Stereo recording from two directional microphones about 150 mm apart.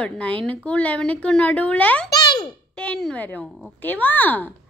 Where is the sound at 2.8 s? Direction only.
5° left (ahead or behind).